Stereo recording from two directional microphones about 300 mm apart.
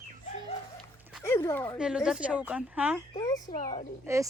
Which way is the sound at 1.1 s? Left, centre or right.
Centre.